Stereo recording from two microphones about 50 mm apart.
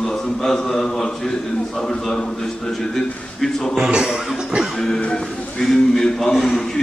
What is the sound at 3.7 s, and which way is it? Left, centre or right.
Speech, centre.